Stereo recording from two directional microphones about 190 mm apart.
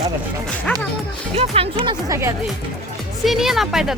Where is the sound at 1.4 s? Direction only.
30° right (ahead or behind).